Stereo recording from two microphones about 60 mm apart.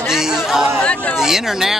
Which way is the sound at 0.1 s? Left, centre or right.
Centre.